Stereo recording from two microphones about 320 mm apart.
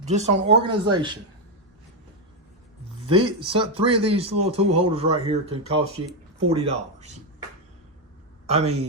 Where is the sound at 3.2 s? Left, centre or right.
Centre.